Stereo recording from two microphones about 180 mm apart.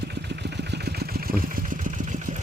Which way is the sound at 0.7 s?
60° right (ahead or behind).